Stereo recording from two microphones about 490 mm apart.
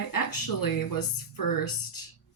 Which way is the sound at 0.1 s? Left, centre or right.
Left.